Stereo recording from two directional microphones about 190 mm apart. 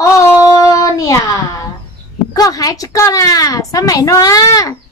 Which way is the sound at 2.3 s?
20° left (ahead or behind).